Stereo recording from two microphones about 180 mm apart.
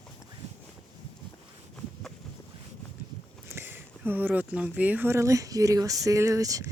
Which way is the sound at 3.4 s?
10° right (ahead or behind).